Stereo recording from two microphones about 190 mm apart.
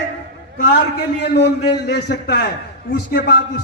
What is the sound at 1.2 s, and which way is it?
A man's voice, 60° left (ahead or behind).